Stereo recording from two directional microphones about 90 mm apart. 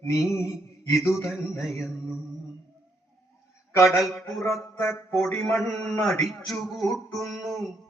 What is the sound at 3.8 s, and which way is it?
Mantra, centre (ahead or behind).